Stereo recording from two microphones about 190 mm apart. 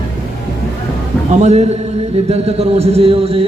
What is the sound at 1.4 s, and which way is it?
A man's voice, 35° right (ahead or behind).